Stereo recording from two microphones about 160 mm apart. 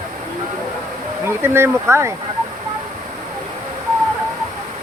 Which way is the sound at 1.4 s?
15° right (ahead or behind).